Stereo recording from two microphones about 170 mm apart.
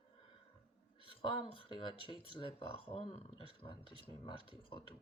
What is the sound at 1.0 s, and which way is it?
Speech, 30° left (ahead or behind).